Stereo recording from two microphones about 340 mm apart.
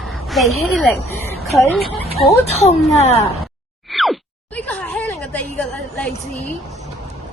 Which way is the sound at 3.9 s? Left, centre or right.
Centre.